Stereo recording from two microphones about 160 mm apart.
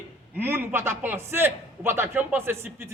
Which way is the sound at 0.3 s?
15° right (ahead or behind).